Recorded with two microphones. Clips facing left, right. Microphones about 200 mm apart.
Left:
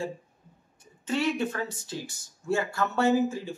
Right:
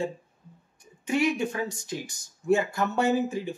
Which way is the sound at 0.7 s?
15° right (ahead or behind).